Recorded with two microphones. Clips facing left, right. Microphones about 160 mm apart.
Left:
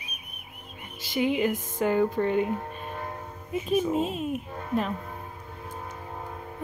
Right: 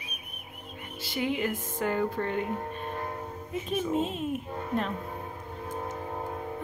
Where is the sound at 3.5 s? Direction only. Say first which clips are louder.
Left 4 dB; 10° left (ahead or behind).